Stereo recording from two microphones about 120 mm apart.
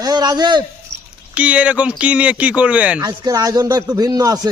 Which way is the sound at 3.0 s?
35° right (ahead or behind).